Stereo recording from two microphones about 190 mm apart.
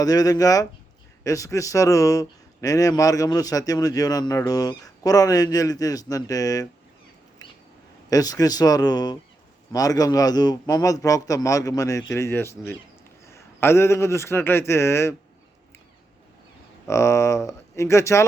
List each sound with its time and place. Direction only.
0.0 s a man's voice: 20° left (ahead or behind)
8.1 s a man's voice: 20° left (ahead or behind)
16.8 s speech: 15° left (ahead or behind)